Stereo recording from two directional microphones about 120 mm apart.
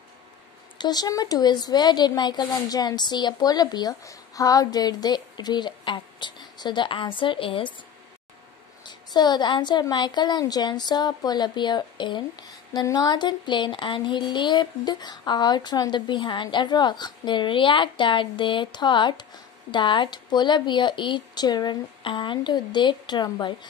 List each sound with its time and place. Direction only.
0.7 s speech: 35° left (ahead or behind)
8.8 s a woman's voice: 35° left (ahead or behind)